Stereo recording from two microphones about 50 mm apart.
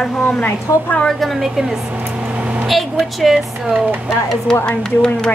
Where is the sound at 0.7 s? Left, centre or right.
Left.